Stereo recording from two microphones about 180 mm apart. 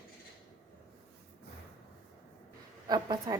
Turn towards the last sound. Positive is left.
turn(degrees=-20)  # may be behind; listen again after turning